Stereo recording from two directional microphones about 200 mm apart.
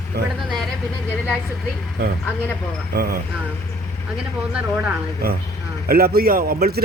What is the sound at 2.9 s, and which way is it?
Speech, 50° right (ahead or behind).